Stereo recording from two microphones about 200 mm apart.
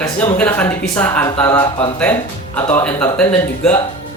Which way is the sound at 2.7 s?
10° left (ahead or behind).